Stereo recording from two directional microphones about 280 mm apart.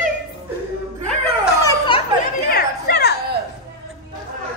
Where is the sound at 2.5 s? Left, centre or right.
Left.